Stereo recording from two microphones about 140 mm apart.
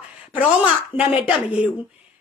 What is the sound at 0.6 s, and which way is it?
A woman's voice, 10° right (ahead or behind).